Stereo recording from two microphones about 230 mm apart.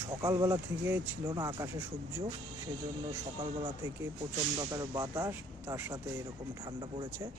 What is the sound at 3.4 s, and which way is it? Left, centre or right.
Speech, right.